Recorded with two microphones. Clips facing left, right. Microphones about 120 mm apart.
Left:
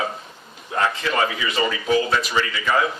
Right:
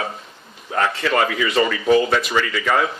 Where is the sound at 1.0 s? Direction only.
80° right.